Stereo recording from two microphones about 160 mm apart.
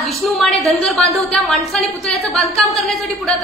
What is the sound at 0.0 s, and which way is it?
A woman's voice, centre (ahead or behind).